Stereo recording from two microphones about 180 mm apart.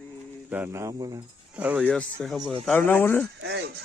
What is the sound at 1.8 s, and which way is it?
Speech, 5° left (ahead or behind).